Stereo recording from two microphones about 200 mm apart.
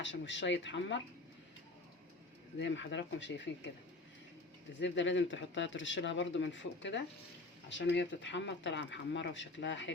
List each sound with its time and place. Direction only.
0.0 s speech: 65° left (ahead or behind)
2.6 s speech: 65° left (ahead or behind)
4.8 s speech: 65° left (ahead or behind)